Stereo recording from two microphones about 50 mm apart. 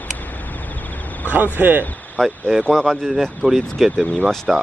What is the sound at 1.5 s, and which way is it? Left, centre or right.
Speech, right.